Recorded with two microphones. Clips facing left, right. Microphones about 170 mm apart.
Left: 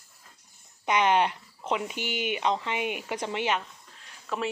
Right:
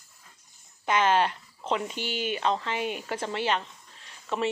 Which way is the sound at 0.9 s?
15° left (ahead or behind).